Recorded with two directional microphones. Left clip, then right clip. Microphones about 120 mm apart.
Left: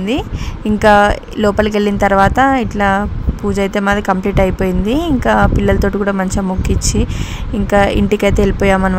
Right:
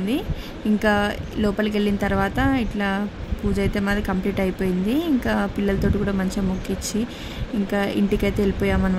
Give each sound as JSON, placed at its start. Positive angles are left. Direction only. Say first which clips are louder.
{"t": 0.7, "sound": "a woman's voice", "louder": "left 13 dB", "side_deg": 45}
{"t": 7.6, "sound": "a woman's voice", "louder": "left 12 dB", "side_deg": 50}